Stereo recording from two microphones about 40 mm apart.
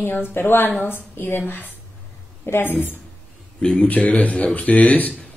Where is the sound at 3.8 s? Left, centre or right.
Left.